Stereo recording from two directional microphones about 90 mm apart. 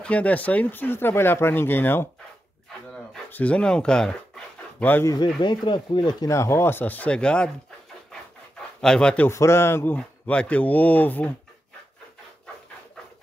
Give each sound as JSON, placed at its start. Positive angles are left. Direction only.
{"t": 0.0, "sound": "speech", "side_deg": 15}
{"t": 3.3, "sound": "speech", "side_deg": 15}
{"t": 4.7, "sound": "speech", "side_deg": 20}
{"t": 5.0, "sound": "speech", "side_deg": 45}
{"t": 5.4, "sound": "speech", "side_deg": 60}
{"t": 6.2, "sound": "speech", "side_deg": 35}
{"t": 8.8, "sound": "speech", "side_deg": 10}
{"t": 9.3, "sound": "speech", "side_deg": 30}
{"t": 9.9, "sound": "speech", "side_deg": 15}